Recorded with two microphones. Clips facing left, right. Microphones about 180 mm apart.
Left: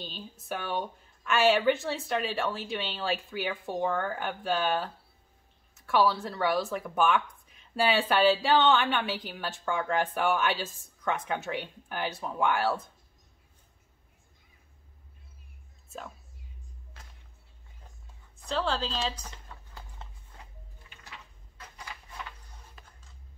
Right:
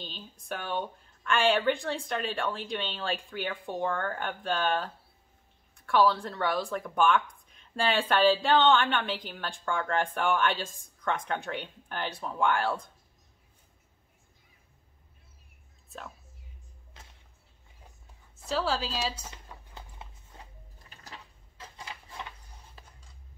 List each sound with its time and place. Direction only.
0.0 s a woman's voice: 5° left (ahead or behind)
18.4 s a woman's voice: 5° right (ahead or behind)
20.8 s a sound: 40° right (ahead or behind)
22.8 s music: 30° right (ahead or behind)